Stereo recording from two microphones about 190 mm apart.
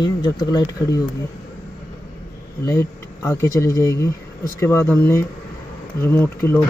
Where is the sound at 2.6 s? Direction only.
15° left (ahead or behind).